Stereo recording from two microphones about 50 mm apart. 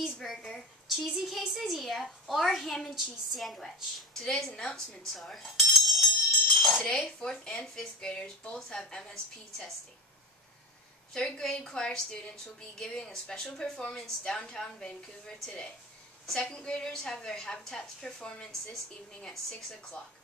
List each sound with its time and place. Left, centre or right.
0.0 s a woman's voice: centre
6.5 s dishes: centre
6.8 s speech: centre
11.1 s speech: centre